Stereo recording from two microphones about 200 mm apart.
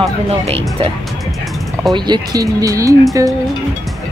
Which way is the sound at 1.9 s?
20° right (ahead or behind).